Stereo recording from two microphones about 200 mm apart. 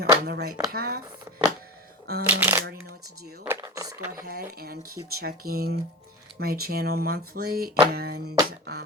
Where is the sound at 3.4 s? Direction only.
15° right (ahead or behind).